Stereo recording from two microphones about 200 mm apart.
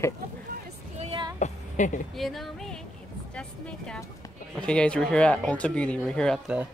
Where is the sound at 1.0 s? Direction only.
25° right (ahead or behind).